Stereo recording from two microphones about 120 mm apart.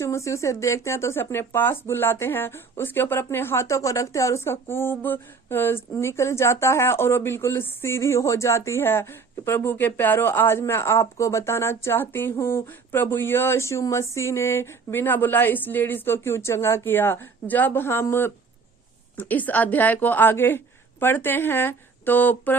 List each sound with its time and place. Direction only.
0.0 s speech: 25° left (ahead or behind)